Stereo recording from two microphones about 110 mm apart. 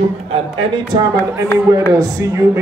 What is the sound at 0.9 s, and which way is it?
A man's voice, 40° right (ahead or behind).